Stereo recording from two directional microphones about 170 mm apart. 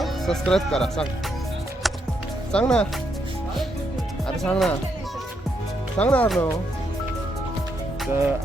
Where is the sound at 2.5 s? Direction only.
5° left (ahead or behind).